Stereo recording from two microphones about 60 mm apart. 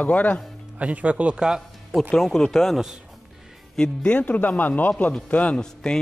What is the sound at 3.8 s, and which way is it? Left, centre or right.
A man's voice, centre.